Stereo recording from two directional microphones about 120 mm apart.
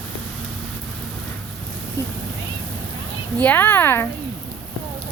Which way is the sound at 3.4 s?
15° left (ahead or behind).